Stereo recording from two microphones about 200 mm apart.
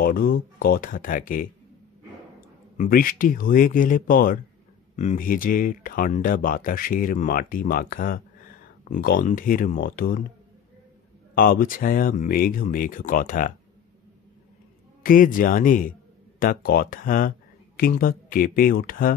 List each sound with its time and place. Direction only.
0.0 s speech: 45° left (ahead or behind)
2.8 s speech: 45° left (ahead or behind)
11.3 s speech: 45° left (ahead or behind)
15.0 s speech: 45° left (ahead or behind)